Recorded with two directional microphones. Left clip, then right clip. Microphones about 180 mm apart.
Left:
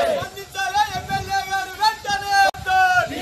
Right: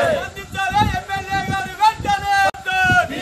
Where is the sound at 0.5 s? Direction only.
15° right (ahead or behind).